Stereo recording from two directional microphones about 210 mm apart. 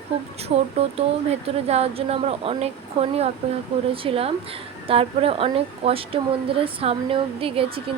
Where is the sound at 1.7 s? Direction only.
30° right (ahead or behind).